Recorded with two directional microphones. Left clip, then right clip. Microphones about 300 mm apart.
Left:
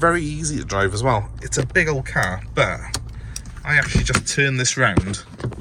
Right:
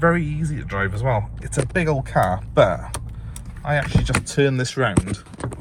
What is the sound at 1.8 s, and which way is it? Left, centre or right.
Speech, centre.